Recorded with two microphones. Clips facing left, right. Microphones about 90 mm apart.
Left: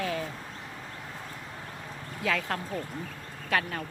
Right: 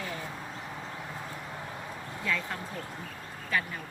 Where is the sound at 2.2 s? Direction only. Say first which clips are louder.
Left 4 dB; 90° left.